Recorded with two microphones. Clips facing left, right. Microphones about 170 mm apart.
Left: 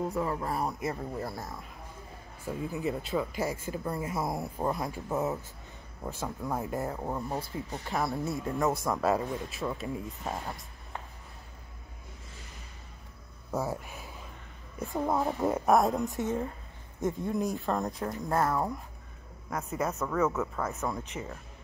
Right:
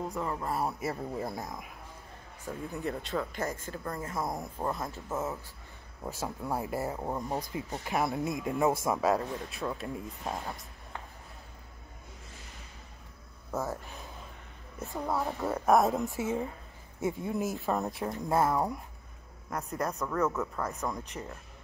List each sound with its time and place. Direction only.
0.1 s speech: 5° left (ahead or behind)
1.2 s speech: 20° right (ahead or behind)
2.4 s speech: 5° left (ahead or behind)
6.0 s speech: 10° right (ahead or behind)
8.9 s speech: centre (ahead or behind)
13.5 s a child's voice: 10° left (ahead or behind)
15.6 s speech: centre (ahead or behind)
19.5 s speech: 5° left (ahead or behind)